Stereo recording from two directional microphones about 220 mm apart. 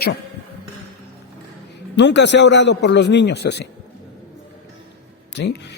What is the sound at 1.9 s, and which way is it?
A man's voice, 50° left (ahead or behind).